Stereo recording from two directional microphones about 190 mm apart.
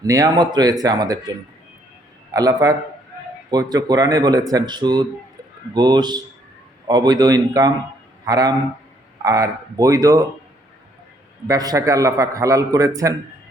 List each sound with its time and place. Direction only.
0.0 s speech: 20° right (ahead or behind)
2.3 s a man's voice: 20° right (ahead or behind)
11.4 s a man's voice: 20° right (ahead or behind)